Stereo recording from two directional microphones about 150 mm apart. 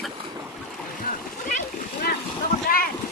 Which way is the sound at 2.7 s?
75° left (ahead or behind).